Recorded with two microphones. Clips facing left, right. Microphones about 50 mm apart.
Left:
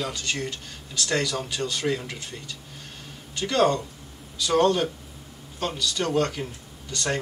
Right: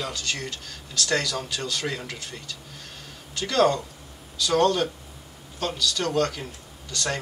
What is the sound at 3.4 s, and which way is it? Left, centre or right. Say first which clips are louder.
Speech: even; centre.